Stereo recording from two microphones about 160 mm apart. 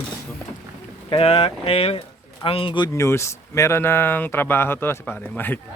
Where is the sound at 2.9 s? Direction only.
15° left (ahead or behind).